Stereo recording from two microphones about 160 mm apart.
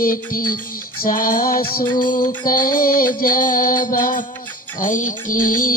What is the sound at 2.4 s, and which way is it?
Music, 60° left (ahead or behind).